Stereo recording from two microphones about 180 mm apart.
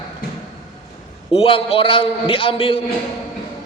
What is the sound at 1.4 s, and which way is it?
A man's voice, 30° left (ahead or behind).